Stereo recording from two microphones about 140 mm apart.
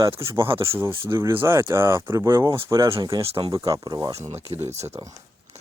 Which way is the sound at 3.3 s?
30° right (ahead or behind).